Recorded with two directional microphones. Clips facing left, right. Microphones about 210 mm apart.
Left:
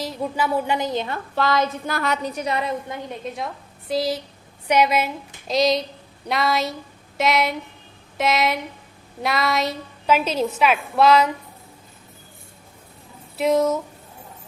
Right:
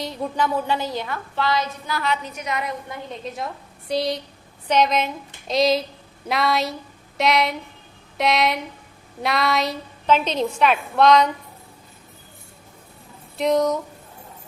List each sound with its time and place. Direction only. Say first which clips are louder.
0.0 s a woman's voice: even; 5° left (ahead or behind); by 1.2 s 25° left (ahead or behind)
1.4 s a sound: left 3 dB; 50° left (ahead or behind)
2.2 s a woman's voice: left 4 dB; 35° left (ahead or behind)
3.3 s a woman's voice: even; centre (ahead or behind)
13.3 s a woman's voice: left 1 dB; 5° left (ahead or behind)